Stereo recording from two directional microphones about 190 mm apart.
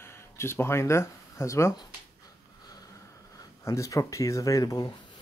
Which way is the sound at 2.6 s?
20° left (ahead or behind).